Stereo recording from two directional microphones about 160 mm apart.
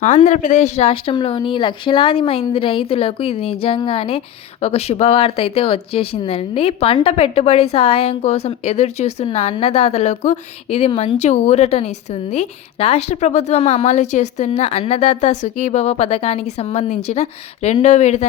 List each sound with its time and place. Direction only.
0.0 s speech: 50° left (ahead or behind)